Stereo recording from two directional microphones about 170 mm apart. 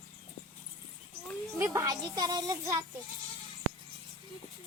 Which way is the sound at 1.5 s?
15° right (ahead or behind).